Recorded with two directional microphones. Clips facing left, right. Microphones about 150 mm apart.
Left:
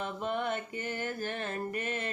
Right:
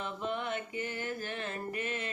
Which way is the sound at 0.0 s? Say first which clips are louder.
Left 3 dB; 45° left (ahead or behind).